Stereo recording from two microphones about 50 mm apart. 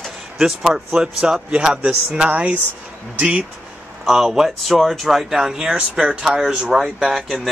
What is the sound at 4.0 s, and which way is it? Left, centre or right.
Speech, centre.